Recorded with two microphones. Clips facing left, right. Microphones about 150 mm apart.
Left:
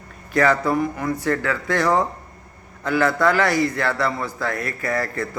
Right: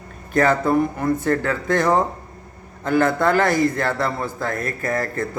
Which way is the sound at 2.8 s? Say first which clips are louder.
Right 1 dB; 50° right (ahead or behind).